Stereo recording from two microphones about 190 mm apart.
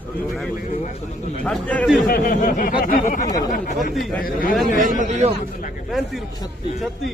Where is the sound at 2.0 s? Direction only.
50° left (ahead or behind).